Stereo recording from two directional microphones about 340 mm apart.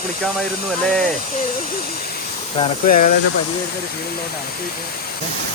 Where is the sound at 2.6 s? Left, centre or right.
Left.